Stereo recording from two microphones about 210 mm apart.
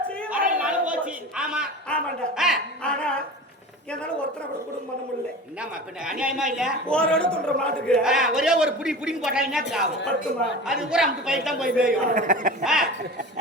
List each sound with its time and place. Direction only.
0.3 s chatter: 40° right (ahead or behind)
0.6 s a man's voice: 5° right (ahead or behind)
5.5 s speech: 5° right (ahead or behind)
10.0 s speech: 55° left (ahead or behind)
10.7 s speech: 5° right (ahead or behind)
12.1 s speech: 35° right (ahead or behind)
12.6 s speech: centre (ahead or behind)